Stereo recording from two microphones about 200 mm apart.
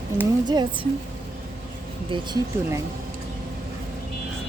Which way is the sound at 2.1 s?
20° right (ahead or behind).